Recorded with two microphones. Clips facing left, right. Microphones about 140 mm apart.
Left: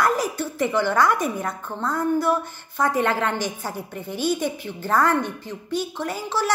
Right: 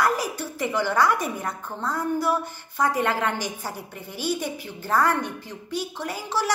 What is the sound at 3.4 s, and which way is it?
Speech, 45° left (ahead or behind).